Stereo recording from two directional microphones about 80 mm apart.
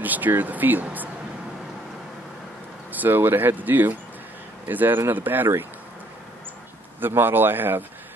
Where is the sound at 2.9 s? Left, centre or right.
Right.